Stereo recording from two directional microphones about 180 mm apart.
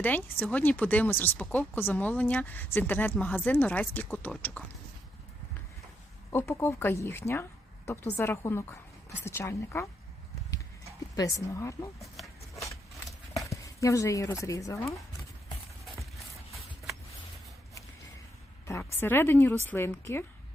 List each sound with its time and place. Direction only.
0.0 s speech: 10° left (ahead or behind)
6.3 s speech: 15° left (ahead or behind)
11.2 s speech: 15° left (ahead or behind)
12.1 s a sound: centre (ahead or behind)
13.3 s speech: 15° left (ahead or behind)
18.6 s speech: 15° left (ahead or behind)